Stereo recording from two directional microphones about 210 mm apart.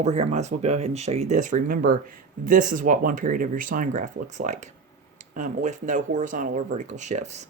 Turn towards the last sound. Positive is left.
turn(degrees=-35)  # may be behind; listen again after turning